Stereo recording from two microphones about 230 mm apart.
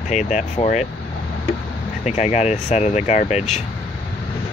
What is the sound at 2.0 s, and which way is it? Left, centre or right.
Speech, left.